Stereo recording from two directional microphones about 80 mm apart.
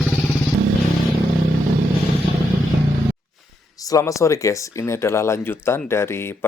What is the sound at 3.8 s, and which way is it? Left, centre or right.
Speech, left.